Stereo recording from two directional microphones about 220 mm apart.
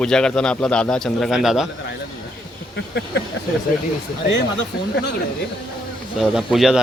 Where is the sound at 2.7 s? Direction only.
50° left (ahead or behind).